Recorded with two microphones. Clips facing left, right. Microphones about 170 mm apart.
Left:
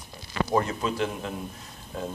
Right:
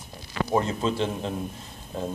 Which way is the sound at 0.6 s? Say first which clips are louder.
Right 2 dB; 25° right (ahead or behind).